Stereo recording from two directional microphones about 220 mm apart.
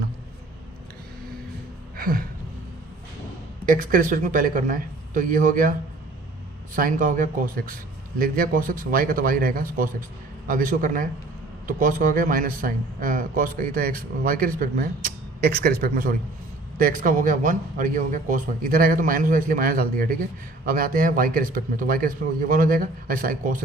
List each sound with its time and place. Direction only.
2.0 s a sound: 40° right (ahead or behind)
3.7 s speech: 40° right (ahead or behind)
6.7 s speech: 40° right (ahead or behind)